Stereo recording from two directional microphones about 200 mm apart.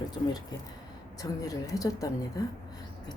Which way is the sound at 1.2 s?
15° left (ahead or behind).